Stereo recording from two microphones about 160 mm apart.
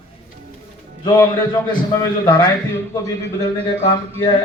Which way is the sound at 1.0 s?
25° left (ahead or behind).